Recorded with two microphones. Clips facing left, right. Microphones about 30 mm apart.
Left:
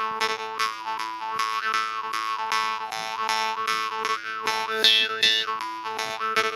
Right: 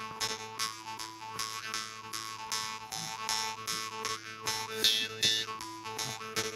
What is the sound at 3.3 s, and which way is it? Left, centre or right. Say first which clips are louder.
Boing: left 11 dB; left.